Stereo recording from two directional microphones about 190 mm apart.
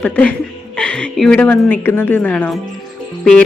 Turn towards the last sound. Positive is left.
turn(degrees=5)  # may be behind; listen again after turning